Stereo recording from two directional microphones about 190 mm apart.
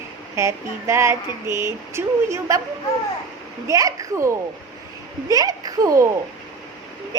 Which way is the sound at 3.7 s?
15° right (ahead or behind).